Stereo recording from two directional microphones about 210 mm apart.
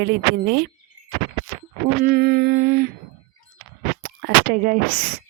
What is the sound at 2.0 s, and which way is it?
Speech, 45° right (ahead or behind).